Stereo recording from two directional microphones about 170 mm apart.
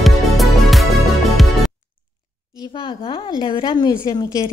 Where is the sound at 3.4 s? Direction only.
30° left (ahead or behind).